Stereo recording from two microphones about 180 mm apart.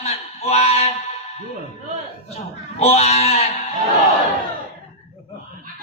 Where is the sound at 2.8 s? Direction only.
35° left (ahead or behind).